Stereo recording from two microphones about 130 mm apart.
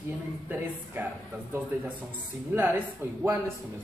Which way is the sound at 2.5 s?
15° right (ahead or behind).